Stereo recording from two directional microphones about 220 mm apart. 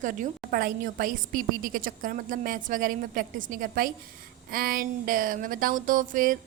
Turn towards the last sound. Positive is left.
turn(degrees=-35)  # may be behind; listen again after turning